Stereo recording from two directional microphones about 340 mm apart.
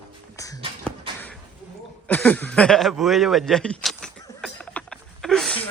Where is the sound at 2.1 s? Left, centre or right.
Centre.